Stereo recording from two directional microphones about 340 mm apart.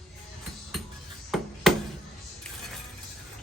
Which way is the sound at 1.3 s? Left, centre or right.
Centre.